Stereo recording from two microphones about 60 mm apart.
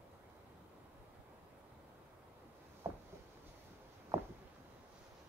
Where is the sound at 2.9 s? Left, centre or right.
Right.